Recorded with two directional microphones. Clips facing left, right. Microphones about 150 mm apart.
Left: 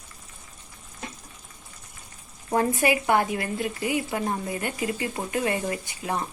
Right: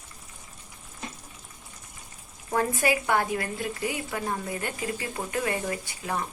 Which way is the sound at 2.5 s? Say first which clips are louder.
Left 3 dB; 20° left (ahead or behind).